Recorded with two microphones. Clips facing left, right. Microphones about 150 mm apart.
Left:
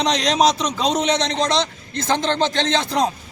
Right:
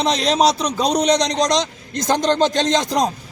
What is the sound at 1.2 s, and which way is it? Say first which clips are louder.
A man's voice: right 2 dB; 15° right (ahead or behind).